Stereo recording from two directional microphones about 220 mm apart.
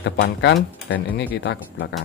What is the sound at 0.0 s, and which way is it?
Speech, 50° left (ahead or behind).